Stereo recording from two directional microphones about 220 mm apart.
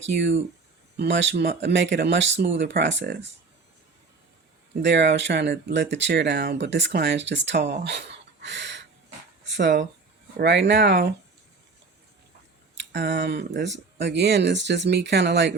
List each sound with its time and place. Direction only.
0.0 s speech: 55° right (ahead or behind)
4.8 s speech: 55° right (ahead or behind)
9.4 s a sound: 55° right (ahead or behind)
10.3 s speech: 50° right (ahead or behind)
12.7 s speech: 55° right (ahead or behind)